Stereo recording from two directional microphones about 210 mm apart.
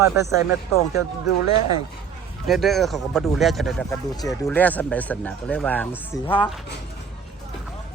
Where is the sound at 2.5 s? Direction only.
Centre (ahead or behind).